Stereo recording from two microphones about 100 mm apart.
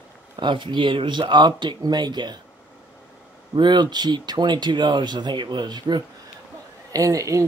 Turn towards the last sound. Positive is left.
turn(degrees=-35)  # may be behind; listen again after turning